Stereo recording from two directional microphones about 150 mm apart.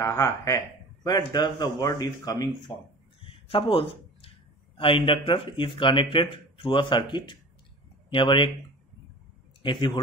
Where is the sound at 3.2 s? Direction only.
35° left (ahead or behind).